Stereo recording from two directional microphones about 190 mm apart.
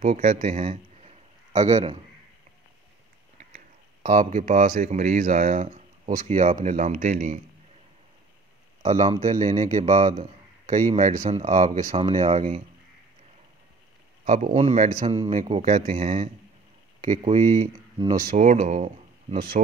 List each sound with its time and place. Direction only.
0.0 s a man's voice: 40° right (ahead or behind)
3.5 s speech: 40° right (ahead or behind)
8.8 s a man's voice: 35° right (ahead or behind)
14.2 s a man's voice: 40° right (ahead or behind)
17.9 s speech: 20° right (ahead or behind)
18.3 s a man's voice: 40° right (ahead or behind)